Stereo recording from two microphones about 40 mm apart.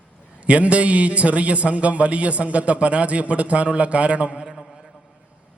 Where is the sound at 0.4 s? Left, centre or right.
Right.